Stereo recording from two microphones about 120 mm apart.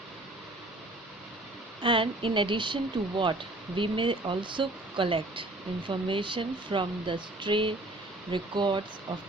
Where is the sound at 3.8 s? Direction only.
45° right (ahead or behind).